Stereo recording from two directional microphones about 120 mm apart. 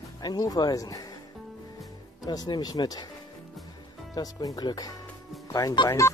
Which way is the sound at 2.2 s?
35° left (ahead or behind).